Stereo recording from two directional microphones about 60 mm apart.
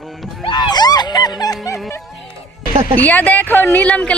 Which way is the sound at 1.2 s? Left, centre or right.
Left.